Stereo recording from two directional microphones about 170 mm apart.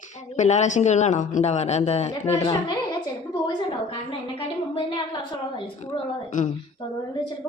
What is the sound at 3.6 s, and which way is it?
A woman's voice, 30° left (ahead or behind).